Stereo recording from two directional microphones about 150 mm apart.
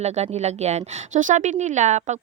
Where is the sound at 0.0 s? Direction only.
45° right (ahead or behind).